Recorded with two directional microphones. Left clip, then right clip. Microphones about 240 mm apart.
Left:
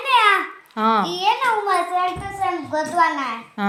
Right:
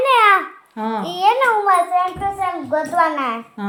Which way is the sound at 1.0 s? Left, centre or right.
Centre.